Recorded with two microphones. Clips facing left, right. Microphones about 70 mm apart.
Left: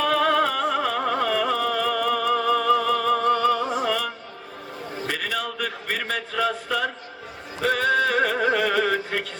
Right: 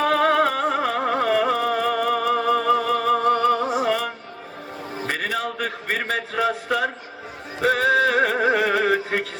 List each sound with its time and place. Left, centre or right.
0.0 s music: right
5.0 s a sound: right
6.7 s a man's voice: right
8.0 s music: right